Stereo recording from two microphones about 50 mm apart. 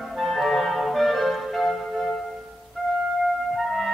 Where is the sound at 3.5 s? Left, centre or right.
Centre.